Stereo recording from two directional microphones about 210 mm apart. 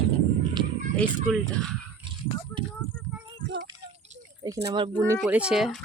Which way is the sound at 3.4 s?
55° right (ahead or behind).